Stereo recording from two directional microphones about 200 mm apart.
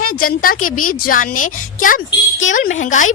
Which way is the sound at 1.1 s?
45° left (ahead or behind).